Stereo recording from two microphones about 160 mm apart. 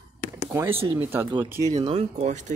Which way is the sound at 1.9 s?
45° right (ahead or behind).